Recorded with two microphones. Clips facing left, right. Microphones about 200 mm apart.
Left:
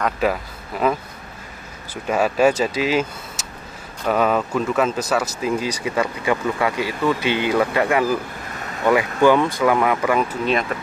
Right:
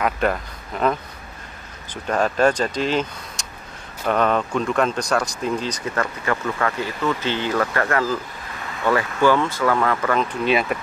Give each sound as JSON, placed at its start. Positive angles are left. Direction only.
{"t": 0.0, "sound": "a man's voice", "side_deg": 5}
{"t": 2.0, "sound": "speech", "side_deg": 10}
{"t": 10.4, "sound": "speech", "side_deg": -5}